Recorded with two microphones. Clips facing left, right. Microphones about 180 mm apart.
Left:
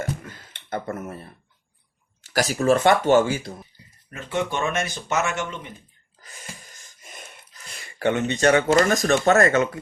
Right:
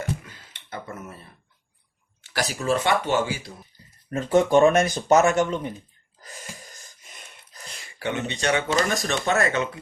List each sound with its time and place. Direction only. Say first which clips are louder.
0.2 s a sound: left 6 dB; 50° left (ahead or behind)
2.2 s speech: left 6 dB; 45° left (ahead or behind)
4.1 s speech: right 9 dB; 40° right (ahead or behind)
7.9 s speech: left 6 dB; 50° left (ahead or behind)